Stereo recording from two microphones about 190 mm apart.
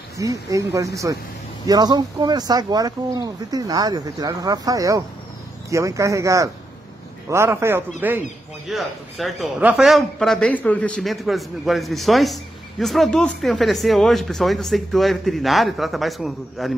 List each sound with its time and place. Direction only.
0.2 s a man's voice: 15° right (ahead or behind); by 16.7 s centre (ahead or behind)